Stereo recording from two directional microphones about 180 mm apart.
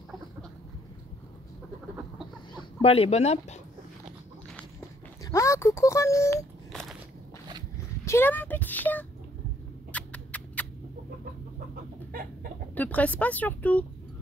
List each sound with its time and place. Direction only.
2.5 s speech: 35° left (ahead or behind)
5.2 s speech: 15° left (ahead or behind)
6.7 s biting: centre (ahead or behind)
8.0 s speech: 15° left (ahead or behind)
9.9 s mouse: 10° left (ahead or behind)
12.7 s speech: 10° left (ahead or behind)